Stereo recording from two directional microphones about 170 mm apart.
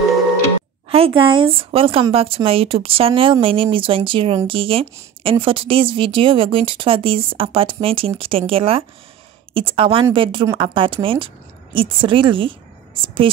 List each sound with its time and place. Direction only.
0.8 s a woman's voice: 35° right (ahead or behind)